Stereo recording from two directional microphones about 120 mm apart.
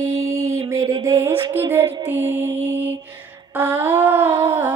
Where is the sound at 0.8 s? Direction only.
45° right (ahead or behind).